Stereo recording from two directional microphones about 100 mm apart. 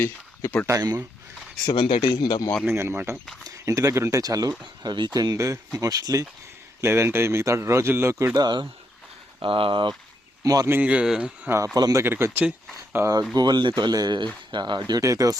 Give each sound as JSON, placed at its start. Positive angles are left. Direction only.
{"t": 0.7, "sound": "speech", "side_deg": -40}
{"t": 1.6, "sound": "speech", "side_deg": 50}
{"t": 2.0, "sound": "speech", "side_deg": 45}
{"t": 2.6, "sound": "a man's voice", "side_deg": -25}
{"t": 5.4, "sound": "a man's voice", "side_deg": -35}
{"t": 8.4, "sound": "speech", "side_deg": -45}
{"t": 9.4, "sound": "speech", "side_deg": -60}
{"t": 10.4, "sound": "speech", "side_deg": -35}
{"t": 10.7, "sound": "speech", "side_deg": -15}
{"t": 11.4, "sound": "speech", "side_deg": -30}
{"t": 12.0, "sound": "a man's voice", "side_deg": -20}
{"t": 13.3, "sound": "speech", "side_deg": -45}